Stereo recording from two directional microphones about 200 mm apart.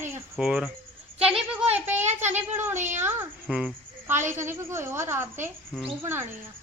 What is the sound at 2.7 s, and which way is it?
Speech, 35° right (ahead or behind).